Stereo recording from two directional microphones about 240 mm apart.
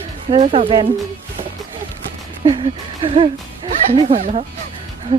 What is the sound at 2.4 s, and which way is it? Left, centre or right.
Speech, right.